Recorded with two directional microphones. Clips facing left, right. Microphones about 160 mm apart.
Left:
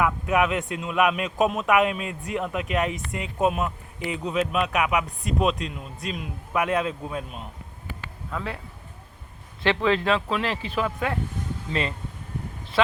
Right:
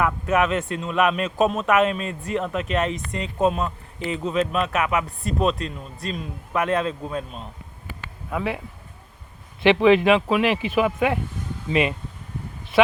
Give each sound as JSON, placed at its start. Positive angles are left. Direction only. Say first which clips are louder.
{"t": 0.3, "sound": "speech", "louder": "right 2 dB", "side_deg": 15}
{"t": 4.2, "sound": "speech", "louder": "right 2 dB", "side_deg": 5}
{"t": 8.3, "sound": "speech", "louder": "right 6 dB", "side_deg": -15}
{"t": 9.6, "sound": "speech", "louder": "right 7 dB", "side_deg": -15}